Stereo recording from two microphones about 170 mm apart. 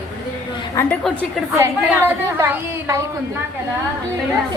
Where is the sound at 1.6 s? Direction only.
15° right (ahead or behind).